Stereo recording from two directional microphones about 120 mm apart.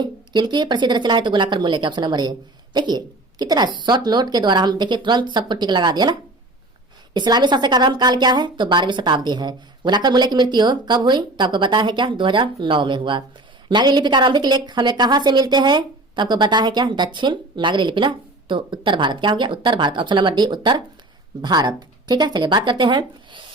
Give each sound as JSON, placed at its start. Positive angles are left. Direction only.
{"t": 0.0, "sound": "a woman's voice", "side_deg": -40}